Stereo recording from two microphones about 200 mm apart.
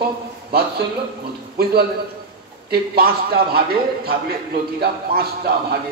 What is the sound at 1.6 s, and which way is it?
A man's voice, 50° right (ahead or behind).